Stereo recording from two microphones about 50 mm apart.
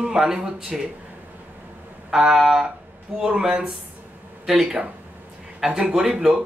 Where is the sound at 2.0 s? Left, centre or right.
Centre.